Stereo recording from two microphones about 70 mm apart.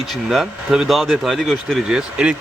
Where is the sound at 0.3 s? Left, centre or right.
Centre.